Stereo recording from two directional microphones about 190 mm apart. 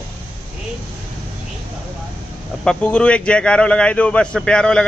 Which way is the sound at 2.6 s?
5° left (ahead or behind).